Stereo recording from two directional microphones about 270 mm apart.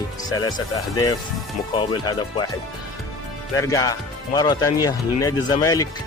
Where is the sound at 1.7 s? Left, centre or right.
Centre.